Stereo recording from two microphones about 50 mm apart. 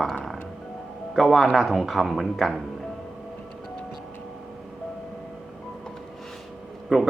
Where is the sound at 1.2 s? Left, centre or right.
Centre.